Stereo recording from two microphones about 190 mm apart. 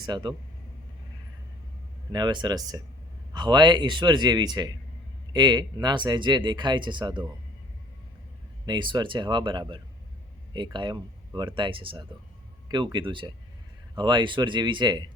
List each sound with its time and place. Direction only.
0.0 s speech: 25° right (ahead or behind)
2.1 s speech: 25° right (ahead or behind)
8.6 s speech: 25° right (ahead or behind)